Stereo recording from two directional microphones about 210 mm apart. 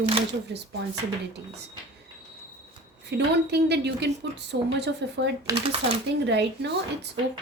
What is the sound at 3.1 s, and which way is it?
A woman's voice, 55° right (ahead or behind).